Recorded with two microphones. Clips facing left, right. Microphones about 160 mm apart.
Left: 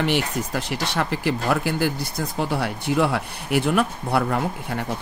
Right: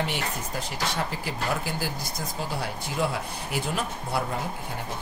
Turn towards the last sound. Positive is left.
turn(degrees=70)  # may be behind; listen again after turning